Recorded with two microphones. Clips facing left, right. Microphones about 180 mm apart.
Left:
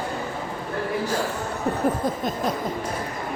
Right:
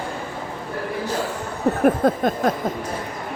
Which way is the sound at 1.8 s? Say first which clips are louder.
Right 8 dB; 90° right.